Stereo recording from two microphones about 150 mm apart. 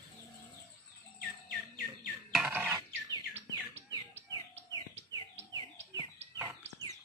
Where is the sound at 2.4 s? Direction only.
10° right (ahead or behind).